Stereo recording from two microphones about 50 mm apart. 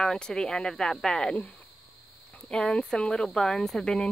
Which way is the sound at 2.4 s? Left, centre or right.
Centre.